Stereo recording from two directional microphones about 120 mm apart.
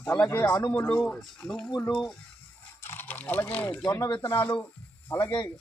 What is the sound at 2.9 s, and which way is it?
Speech, 15° left (ahead or behind).